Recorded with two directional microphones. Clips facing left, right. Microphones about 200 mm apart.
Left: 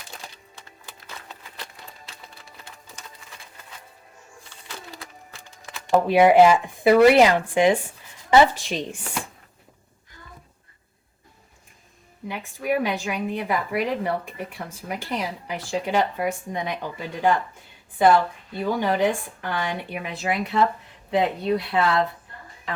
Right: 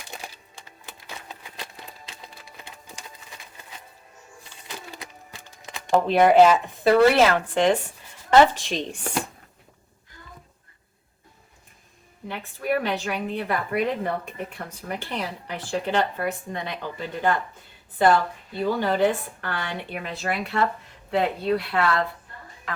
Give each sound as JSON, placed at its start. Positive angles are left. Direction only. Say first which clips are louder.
{"t": 0.2, "sound": "music", "louder": "right 2 dB", "side_deg": -15}
{"t": 4.9, "sound": "music", "louder": "right 1 dB", "side_deg": -15}
{"t": 5.9, "sound": "speech", "louder": "left 1 dB", "side_deg": 10}
{"t": 12.3, "sound": "speech", "louder": "left 1 dB", "side_deg": 15}
{"t": 18.7, "sound": "speech", "louder": "even", "side_deg": 15}